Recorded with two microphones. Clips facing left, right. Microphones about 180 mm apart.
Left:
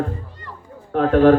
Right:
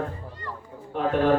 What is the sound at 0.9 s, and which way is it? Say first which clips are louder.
Speech: left 9 dB; 90° left.